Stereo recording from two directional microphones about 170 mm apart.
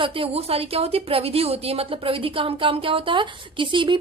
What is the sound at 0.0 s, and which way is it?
Speech, 30° right (ahead or behind).